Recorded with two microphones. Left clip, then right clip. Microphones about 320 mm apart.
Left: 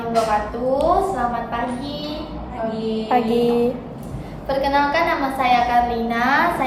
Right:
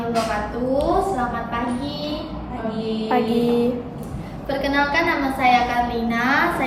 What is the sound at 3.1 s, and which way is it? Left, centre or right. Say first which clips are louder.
Music: left 2 dB; left.